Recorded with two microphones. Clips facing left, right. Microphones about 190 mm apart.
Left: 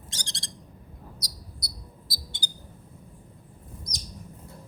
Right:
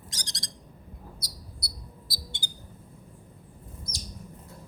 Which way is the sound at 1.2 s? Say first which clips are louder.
Left 1 dB; 40° left (ahead or behind).